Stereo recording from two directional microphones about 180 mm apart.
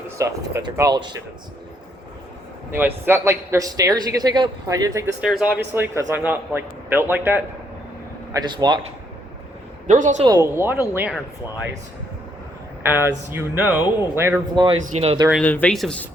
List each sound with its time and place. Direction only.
0.2 s a man's voice: 15° right (ahead or behind)
2.7 s a man's voice: 10° right (ahead or behind)
5.2 s a man's voice: 5° right (ahead or behind)
8.3 s a man's voice: 25° right (ahead or behind)
9.8 s a man's voice: 45° right (ahead or behind)
10.2 s a man's voice: 15° right (ahead or behind)
12.8 s a man's voice: 10° right (ahead or behind)
14.5 s a man's voice: 25° right (ahead or behind)
14.8 s speech: 35° right (ahead or behind)
15.3 s speech: 5° left (ahead or behind)